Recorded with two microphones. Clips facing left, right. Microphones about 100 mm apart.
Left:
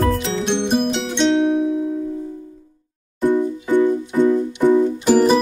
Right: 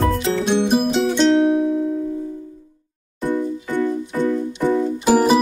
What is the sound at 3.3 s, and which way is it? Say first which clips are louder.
Music: left 4 dB; 15° left (ahead or behind).